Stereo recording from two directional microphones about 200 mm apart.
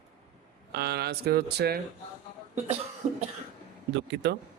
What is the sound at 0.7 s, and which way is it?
Speech, 55° right (ahead or behind).